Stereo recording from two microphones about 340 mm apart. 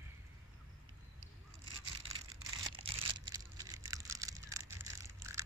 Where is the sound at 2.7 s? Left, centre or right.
Centre.